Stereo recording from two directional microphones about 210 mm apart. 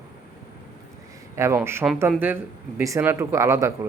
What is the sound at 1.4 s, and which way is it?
Speech, 10° right (ahead or behind).